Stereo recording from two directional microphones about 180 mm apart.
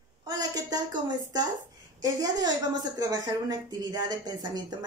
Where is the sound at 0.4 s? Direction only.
20° right (ahead or behind).